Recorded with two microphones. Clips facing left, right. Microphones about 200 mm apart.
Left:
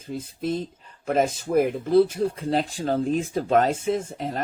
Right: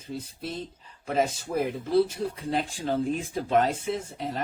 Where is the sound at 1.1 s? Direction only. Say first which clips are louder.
Left 4 dB; 50° left (ahead or behind).